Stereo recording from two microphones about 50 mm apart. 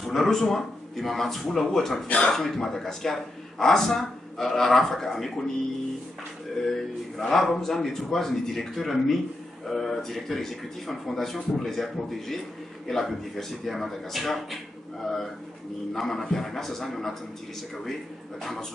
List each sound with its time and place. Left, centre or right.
0.0 s speech: centre
2.0 s speech: left
2.3 s speech: centre
6.6 s speech: centre
15.9 s speech: centre
18.4 s speech: centre